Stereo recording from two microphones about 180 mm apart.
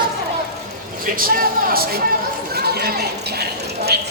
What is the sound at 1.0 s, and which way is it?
Speech, 50° right (ahead or behind).